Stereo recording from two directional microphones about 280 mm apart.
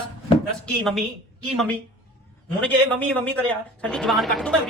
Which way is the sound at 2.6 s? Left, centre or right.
Centre.